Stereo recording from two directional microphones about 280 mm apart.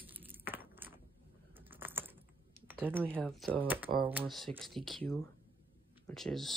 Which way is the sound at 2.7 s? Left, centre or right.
Centre.